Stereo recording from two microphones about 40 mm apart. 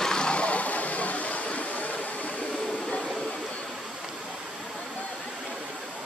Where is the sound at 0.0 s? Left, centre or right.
Left.